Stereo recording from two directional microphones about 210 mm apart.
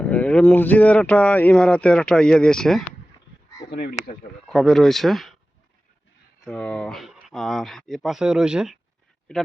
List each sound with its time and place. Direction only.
0.0 s speech: 5° left (ahead or behind)
3.7 s speech: 45° left (ahead or behind)
4.4 s speech: centre (ahead or behind)
6.4 s speech: 5° left (ahead or behind)